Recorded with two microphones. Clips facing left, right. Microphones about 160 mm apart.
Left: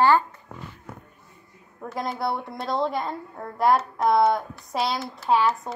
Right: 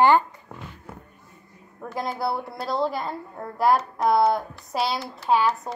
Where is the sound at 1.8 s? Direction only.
Centre (ahead or behind).